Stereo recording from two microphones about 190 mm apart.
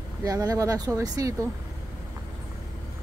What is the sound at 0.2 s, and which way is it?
A woman's voice, 20° right (ahead or behind).